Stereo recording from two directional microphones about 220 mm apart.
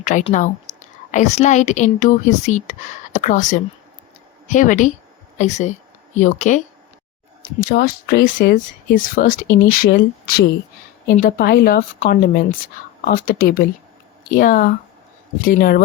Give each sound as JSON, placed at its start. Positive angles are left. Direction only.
{"t": 0.0, "sound": "speech", "side_deg": 35}
{"t": 7.6, "sound": "speech", "side_deg": 45}
{"t": 12.2, "sound": "speech", "side_deg": 45}